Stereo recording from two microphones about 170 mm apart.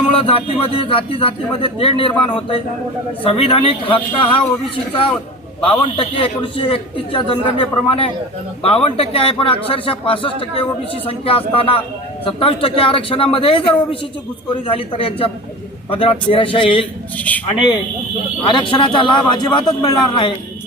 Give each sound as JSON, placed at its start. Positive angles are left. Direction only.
{"t": 0.1, "sound": "a man's voice", "side_deg": 35}
{"t": 5.5, "sound": "a man's voice", "side_deg": 30}
{"t": 17.2, "sound": "speech", "side_deg": 10}
{"t": 18.4, "sound": "a man's voice", "side_deg": 30}